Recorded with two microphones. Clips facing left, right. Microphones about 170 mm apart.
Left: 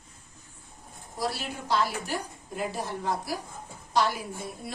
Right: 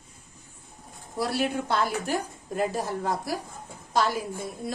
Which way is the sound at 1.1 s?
55° right (ahead or behind).